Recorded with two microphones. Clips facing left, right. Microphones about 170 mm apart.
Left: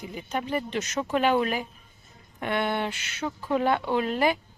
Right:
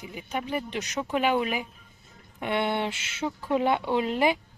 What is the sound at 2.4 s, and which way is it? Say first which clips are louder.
Speech: even; 25° right (ahead or behind).